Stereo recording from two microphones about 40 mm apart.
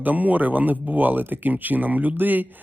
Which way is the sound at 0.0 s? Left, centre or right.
Right.